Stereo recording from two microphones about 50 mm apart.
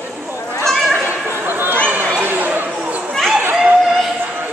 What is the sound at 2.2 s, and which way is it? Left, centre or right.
Chatter, right.